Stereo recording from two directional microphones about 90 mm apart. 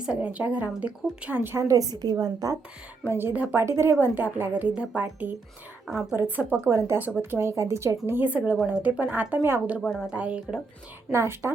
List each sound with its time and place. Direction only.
0.0 s a woman's voice: 10° right (ahead or behind)
1.5 s a woman's voice: 35° right (ahead or behind)
3.1 s speech: 25° right (ahead or behind)
5.9 s a woman's voice: 5° right (ahead or behind)
6.1 s a woman's voice: 20° right (ahead or behind)
11.1 s speech: 30° right (ahead or behind)